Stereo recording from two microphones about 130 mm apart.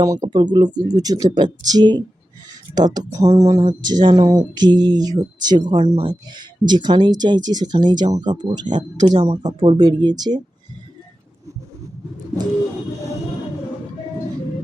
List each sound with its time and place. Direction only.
0.0 s speech: 30° right (ahead or behind)
5.8 s speech: 55° right (ahead or behind)
6.1 s speech: 35° right (ahead or behind)
9.0 s speech: 55° right (ahead or behind)
9.4 s speech: 30° right (ahead or behind)